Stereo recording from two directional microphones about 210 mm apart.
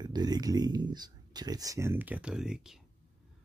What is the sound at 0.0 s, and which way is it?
Speech, 20° right (ahead or behind).